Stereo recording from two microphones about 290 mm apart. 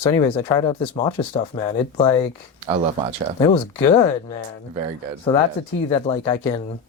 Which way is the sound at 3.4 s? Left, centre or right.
Centre.